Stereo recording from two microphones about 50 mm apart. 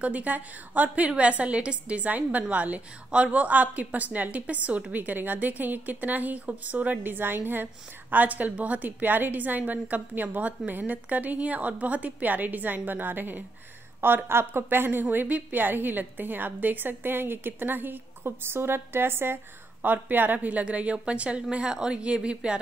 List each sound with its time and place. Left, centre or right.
0.0 s a woman's voice: right
20.3 s a woman's voice: right